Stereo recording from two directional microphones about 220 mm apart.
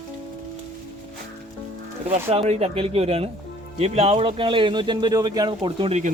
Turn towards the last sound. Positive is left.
turn(degrees=-25)  # may be behind; listen again after turning